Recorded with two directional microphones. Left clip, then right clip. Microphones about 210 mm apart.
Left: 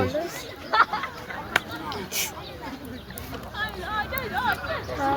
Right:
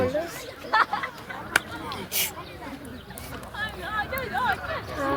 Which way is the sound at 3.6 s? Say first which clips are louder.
Left 1 dB; 50° right (ahead or behind).